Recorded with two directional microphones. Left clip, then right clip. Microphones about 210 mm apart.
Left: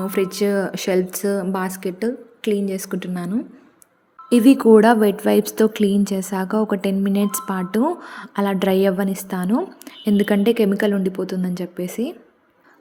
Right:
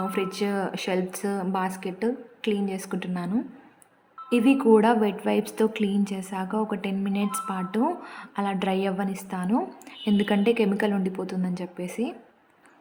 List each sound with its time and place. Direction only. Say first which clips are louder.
0.0 s a woman's voice: left 7 dB; 20° left (ahead or behind)